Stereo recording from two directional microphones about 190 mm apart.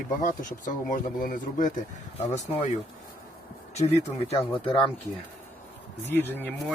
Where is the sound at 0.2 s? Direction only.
45° left (ahead or behind).